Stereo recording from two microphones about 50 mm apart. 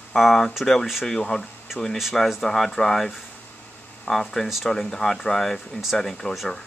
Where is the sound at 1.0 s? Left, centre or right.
Centre.